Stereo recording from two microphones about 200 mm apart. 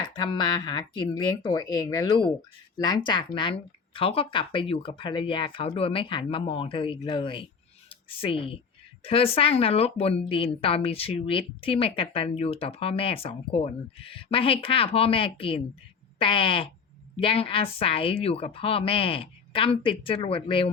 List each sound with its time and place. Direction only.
0.1 s a woman's voice: 20° left (ahead or behind)